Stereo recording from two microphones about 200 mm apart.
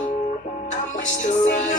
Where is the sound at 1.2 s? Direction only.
35° left (ahead or behind).